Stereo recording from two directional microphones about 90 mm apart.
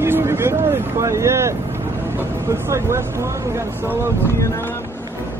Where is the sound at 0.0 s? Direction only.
30° right (ahead or behind).